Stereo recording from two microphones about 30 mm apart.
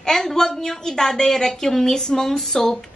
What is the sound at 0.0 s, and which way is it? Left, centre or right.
A woman's voice, centre.